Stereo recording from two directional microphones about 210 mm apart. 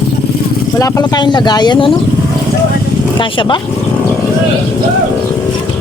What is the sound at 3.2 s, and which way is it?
Speech, 25° left (ahead or behind).